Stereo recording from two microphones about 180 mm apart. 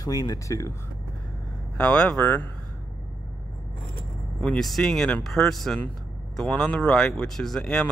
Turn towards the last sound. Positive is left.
turn(degrees=0)  # may be behind; listen again after turning